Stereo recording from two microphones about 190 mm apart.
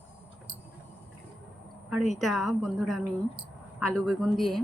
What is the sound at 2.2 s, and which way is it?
Speech, centre (ahead or behind).